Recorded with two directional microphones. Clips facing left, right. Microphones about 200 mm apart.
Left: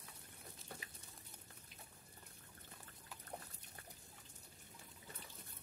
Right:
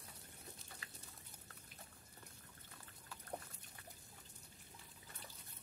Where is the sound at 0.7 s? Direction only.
55° left (ahead or behind).